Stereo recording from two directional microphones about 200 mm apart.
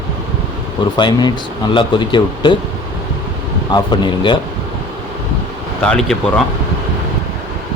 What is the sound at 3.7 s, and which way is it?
Speech, 20° left (ahead or behind).